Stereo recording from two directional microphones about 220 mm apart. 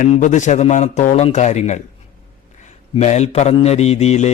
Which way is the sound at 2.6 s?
30° left (ahead or behind).